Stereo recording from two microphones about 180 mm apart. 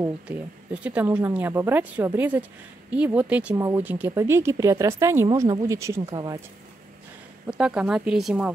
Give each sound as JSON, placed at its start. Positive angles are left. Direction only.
{"t": 0.8, "sound": "speech", "side_deg": -10}
{"t": 7.5, "sound": "speech", "side_deg": -5}